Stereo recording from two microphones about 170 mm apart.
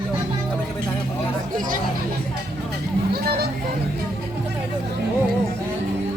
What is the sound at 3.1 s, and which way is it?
Speech, 65° right (ahead or behind).